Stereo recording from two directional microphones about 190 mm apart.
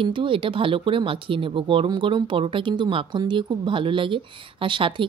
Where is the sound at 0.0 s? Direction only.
25° right (ahead or behind).